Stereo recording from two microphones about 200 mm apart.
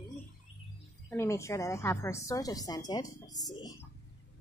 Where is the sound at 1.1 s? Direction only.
15° left (ahead or behind).